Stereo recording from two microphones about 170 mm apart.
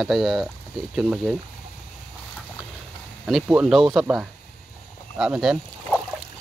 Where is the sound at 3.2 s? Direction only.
Centre (ahead or behind).